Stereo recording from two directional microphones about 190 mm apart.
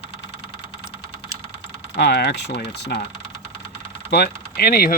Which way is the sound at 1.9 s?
60° left (ahead or behind).